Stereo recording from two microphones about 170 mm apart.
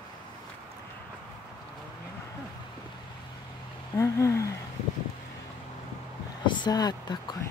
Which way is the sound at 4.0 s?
15° left (ahead or behind).